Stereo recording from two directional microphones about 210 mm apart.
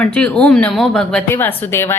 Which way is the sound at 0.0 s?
5° left (ahead or behind).